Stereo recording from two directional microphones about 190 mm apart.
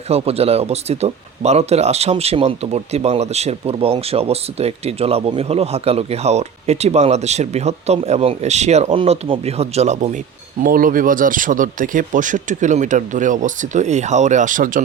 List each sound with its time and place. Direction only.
0.1 s speech: 30° right (ahead or behind)